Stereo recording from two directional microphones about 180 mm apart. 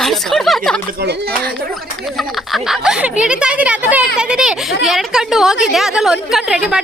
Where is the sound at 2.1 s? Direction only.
Centre (ahead or behind).